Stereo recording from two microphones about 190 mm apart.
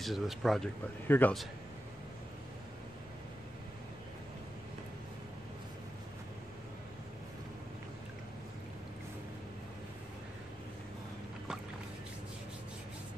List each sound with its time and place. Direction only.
0.0 s speech: centre (ahead or behind)